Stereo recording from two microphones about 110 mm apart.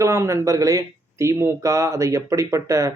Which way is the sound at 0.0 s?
25° right (ahead or behind).